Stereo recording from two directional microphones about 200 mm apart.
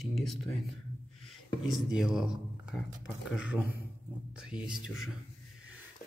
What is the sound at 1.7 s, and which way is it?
Speech, centre (ahead or behind).